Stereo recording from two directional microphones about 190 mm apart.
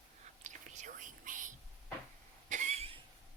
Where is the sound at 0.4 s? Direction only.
40° right (ahead or behind).